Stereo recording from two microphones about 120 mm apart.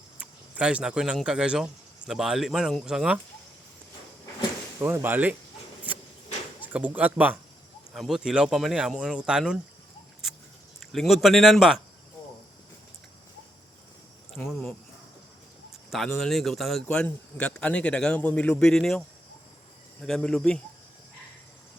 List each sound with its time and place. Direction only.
0.2 s speech: 10° right (ahead or behind)
4.8 s speech: 20° right (ahead or behind)
6.6 s speech: 15° right (ahead or behind)
7.9 s speech: centre (ahead or behind)
10.8 s speech: centre (ahead or behind)
14.4 s speech: 5° left (ahead or behind)
15.9 s a man's voice: centre (ahead or behind)